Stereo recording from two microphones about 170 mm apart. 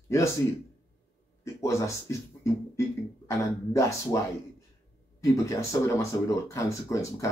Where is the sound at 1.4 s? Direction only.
15° left (ahead or behind).